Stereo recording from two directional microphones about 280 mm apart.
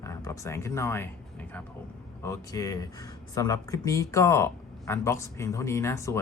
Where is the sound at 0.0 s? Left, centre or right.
Centre.